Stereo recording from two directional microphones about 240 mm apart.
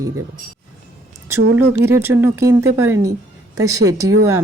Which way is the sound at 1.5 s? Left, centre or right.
Centre.